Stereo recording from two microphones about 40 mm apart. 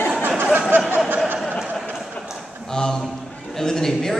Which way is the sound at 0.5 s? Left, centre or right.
Right.